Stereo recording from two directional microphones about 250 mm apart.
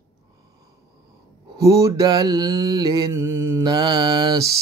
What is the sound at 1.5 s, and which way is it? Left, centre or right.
Mantra, centre.